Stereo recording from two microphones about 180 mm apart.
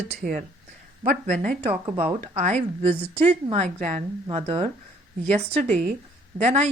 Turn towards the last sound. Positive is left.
turn(degrees=-35)  # may be behind; listen again after turning